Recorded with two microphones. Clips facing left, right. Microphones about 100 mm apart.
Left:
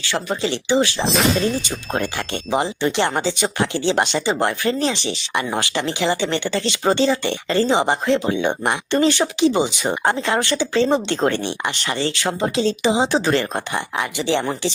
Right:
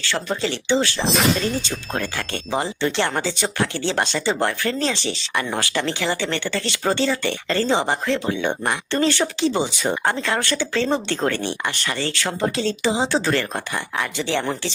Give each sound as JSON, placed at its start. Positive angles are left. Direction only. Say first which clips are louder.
{"t": 0.0, "sound": "speech", "louder": "left 1 dB", "side_deg": 15}